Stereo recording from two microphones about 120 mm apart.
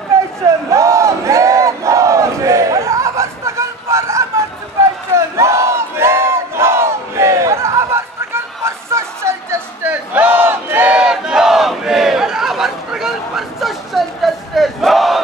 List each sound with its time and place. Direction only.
0.1 s battle cry: 25° right (ahead or behind); by 15.2 s centre (ahead or behind)